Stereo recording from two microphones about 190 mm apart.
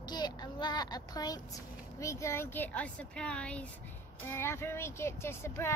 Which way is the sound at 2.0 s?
15° left (ahead or behind).